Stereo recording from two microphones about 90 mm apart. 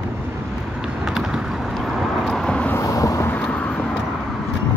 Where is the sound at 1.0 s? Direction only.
5° right (ahead or behind).